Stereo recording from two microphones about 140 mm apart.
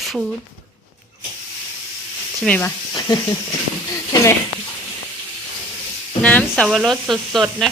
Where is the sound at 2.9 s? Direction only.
30° left (ahead or behind).